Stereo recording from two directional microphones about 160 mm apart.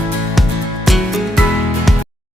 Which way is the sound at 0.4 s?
Centre (ahead or behind).